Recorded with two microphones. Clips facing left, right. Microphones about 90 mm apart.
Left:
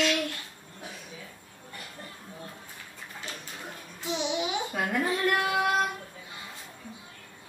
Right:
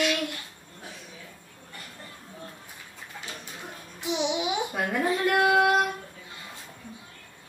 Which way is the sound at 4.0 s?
15° right (ahead or behind).